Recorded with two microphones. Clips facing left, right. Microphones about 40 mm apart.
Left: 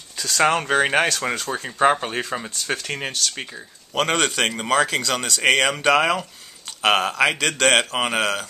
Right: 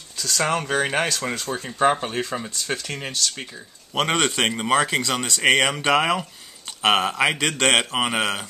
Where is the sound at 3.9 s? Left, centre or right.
Centre.